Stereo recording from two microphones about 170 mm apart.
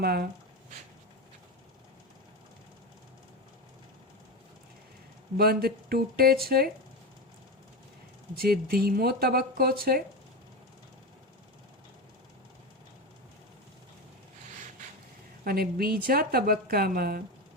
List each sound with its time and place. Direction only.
0.0 s speech: 65° right (ahead or behind)
5.4 s a woman's voice: 65° right (ahead or behind)
8.4 s a woman's voice: 65° right (ahead or behind)
15.4 s a woman's voice: 60° right (ahead or behind)